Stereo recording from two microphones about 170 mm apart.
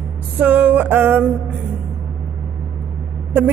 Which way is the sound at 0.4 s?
10° right (ahead or behind).